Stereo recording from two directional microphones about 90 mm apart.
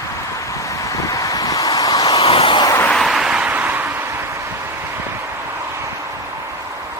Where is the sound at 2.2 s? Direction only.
80° left.